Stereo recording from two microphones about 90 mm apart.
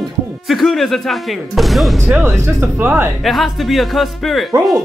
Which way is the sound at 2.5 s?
25° right (ahead or behind).